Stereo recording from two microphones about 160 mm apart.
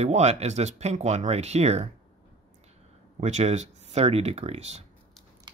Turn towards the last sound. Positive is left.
turn(degrees=-45)  # may be behind; listen again after turning